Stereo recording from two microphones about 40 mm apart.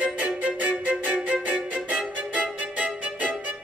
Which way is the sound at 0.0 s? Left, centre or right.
Right.